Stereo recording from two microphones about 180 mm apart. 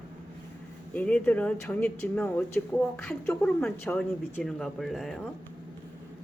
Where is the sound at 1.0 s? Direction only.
10° left (ahead or behind).